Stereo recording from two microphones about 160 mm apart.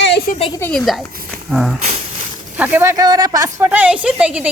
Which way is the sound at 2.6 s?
10° right (ahead or behind).